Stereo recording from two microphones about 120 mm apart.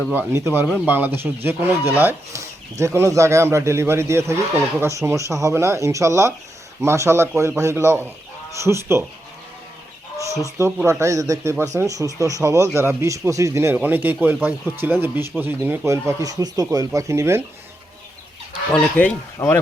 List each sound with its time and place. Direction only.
0.1 s speech: 20° right (ahead or behind)
10.8 s speech: 25° right (ahead or behind)
18.7 s speech: 10° left (ahead or behind)
19.4 s speech: 25° left (ahead or behind)